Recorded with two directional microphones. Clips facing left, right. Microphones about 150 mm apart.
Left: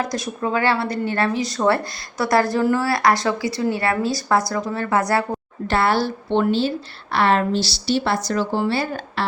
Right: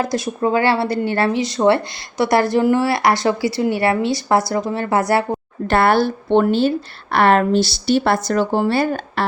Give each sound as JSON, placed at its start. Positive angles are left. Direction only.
{"t": 0.0, "sound": "a woman's voice", "side_deg": -30}
{"t": 5.6, "sound": "a woman's voice", "side_deg": -55}